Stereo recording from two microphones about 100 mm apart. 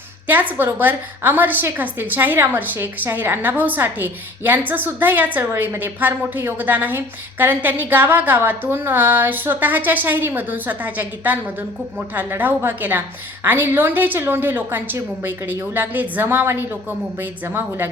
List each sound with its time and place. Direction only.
0.3 s a woman's voice: 20° right (ahead or behind)